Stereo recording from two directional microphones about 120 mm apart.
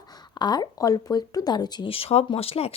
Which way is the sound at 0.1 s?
35° left (ahead or behind).